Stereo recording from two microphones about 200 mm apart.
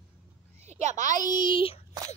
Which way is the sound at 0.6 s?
35° right (ahead or behind).